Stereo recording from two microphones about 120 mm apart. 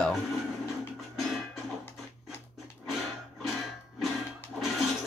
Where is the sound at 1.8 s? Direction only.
15° left (ahead or behind).